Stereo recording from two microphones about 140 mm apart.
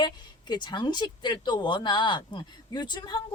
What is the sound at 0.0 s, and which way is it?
Speech, 30° left (ahead or behind).